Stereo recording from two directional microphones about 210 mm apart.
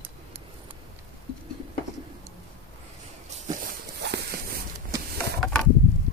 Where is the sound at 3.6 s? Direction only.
45° right (ahead or behind).